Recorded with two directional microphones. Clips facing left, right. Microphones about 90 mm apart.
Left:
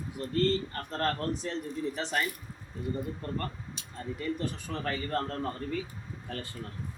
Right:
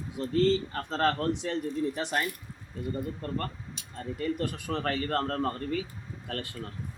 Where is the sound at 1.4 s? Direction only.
65° right (ahead or behind).